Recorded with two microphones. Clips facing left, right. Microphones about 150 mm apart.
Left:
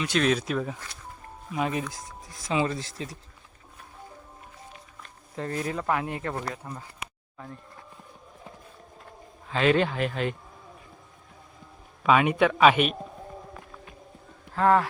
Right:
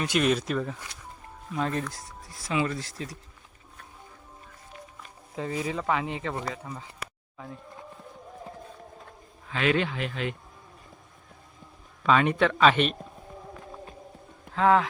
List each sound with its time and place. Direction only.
0.1 s speech: 5° right (ahead or behind); by 3.2 s 25° left (ahead or behind)
5.0 s speech: 5° right (ahead or behind)
9.5 s speech: 35° left (ahead or behind)
12.0 s speech: 10° left (ahead or behind)
14.5 s speech: centre (ahead or behind)